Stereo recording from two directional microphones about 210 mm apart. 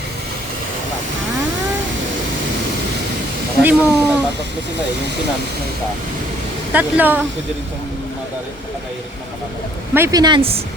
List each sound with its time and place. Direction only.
3.6 s speech: 5° right (ahead or behind)
6.7 s speech: 10° right (ahead or behind)
9.9 s speech: 15° right (ahead or behind)